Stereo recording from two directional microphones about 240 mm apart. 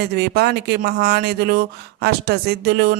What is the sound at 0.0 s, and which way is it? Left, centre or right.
Speech, right.